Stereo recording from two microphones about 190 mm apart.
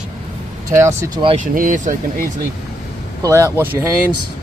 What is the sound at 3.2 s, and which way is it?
Speech, 15° right (ahead or behind).